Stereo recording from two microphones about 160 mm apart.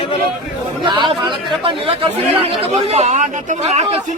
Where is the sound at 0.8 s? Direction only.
30° right (ahead or behind).